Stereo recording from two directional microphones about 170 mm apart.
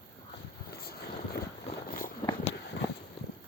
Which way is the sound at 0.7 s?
65° left (ahead or behind).